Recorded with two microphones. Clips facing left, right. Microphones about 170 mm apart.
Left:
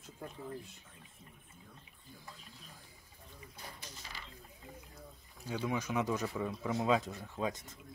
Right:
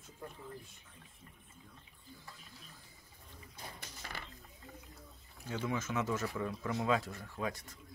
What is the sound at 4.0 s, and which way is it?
Mechanisms, 55° right (ahead or behind).